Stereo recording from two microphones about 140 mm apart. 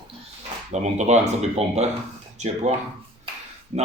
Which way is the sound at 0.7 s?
55° right (ahead or behind).